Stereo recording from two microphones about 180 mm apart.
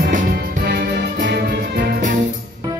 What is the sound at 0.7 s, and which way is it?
Music, 65° right (ahead or behind).